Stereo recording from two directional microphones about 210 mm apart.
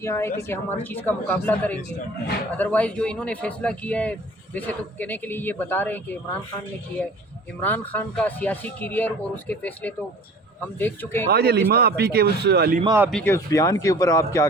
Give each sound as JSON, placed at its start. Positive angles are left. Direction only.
{"t": 0.0, "sound": "speech", "side_deg": 10}
{"t": 7.6, "sound": "speech", "side_deg": 10}
{"t": 11.3, "sound": "a man's voice", "side_deg": -50}
{"t": 12.8, "sound": "speech", "side_deg": -15}
{"t": 13.1, "sound": "speech", "side_deg": 5}